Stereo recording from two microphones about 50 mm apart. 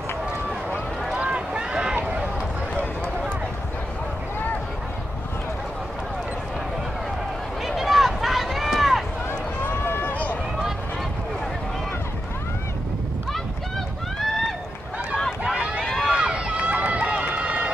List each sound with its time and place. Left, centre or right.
1.1 s boat: right
7.6 s a sound: centre
9.7 s run: left
15.4 s run: centre
15.8 s run: centre
16.2 s run: right